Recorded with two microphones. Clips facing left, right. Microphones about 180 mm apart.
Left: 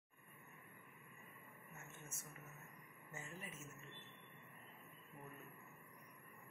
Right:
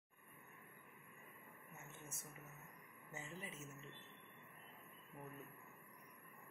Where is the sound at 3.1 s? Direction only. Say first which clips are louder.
Right 1 dB; 20° right (ahead or behind).